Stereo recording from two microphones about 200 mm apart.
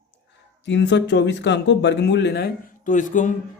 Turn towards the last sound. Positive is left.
turn(degrees=40)  # may be behind; listen again after turning